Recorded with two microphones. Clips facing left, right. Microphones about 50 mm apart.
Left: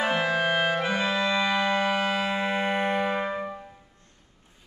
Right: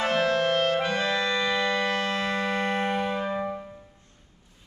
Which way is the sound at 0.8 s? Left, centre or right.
Centre.